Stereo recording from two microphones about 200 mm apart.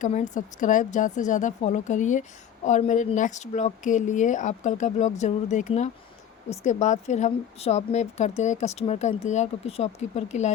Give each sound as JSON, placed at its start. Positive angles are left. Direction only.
{"t": 0.0, "sound": "a woman's voice", "side_deg": 40}